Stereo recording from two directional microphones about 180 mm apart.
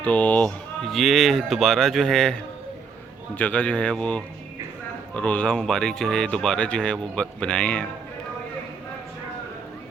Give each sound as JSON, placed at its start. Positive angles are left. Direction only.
{"t": 0.0, "sound": "speech", "side_deg": 10}